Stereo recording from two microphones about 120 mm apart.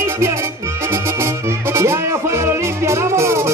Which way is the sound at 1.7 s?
20° right (ahead or behind).